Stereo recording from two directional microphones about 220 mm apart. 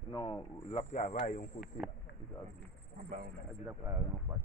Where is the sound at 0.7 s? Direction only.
25° left (ahead or behind).